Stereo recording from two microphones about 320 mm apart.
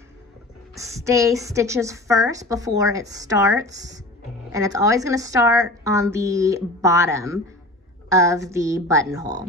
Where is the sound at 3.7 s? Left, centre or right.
Right.